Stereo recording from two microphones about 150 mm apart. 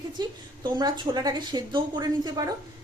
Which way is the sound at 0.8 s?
25° right (ahead or behind).